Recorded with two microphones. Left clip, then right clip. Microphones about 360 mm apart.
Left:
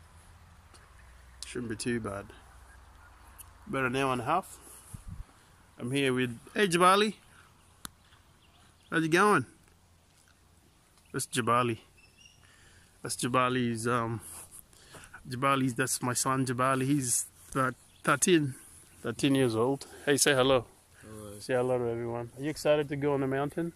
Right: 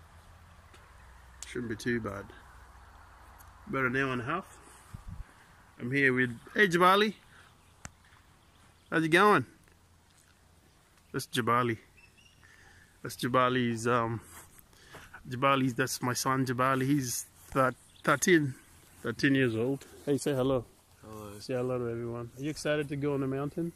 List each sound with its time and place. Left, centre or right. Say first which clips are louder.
1.4 s speech: even; centre
3.7 s speech: left 1 dB; centre
5.8 s speech: right 3 dB; centre
8.8 s speech: right 1 dB; centre
11.1 s speech: even; centre
13.0 s speech: right 1 dB; centre; by 23.7 s left